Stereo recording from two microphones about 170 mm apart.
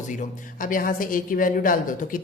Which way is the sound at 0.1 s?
50° left (ahead or behind).